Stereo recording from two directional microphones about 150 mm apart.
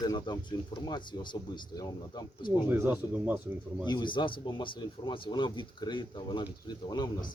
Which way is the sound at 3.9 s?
30° left (ahead or behind).